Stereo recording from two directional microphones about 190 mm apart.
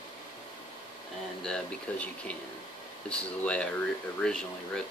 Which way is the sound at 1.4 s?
5° left (ahead or behind).